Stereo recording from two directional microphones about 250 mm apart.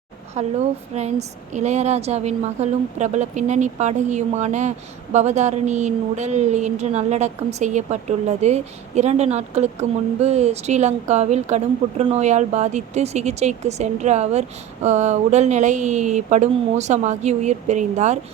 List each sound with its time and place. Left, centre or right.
0.4 s speech: right
1.5 s speech: right